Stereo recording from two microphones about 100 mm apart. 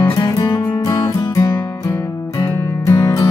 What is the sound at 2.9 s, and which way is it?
Music, 35° left (ahead or behind).